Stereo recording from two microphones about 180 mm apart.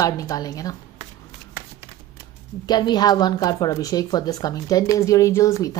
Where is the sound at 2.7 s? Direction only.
25° left (ahead or behind).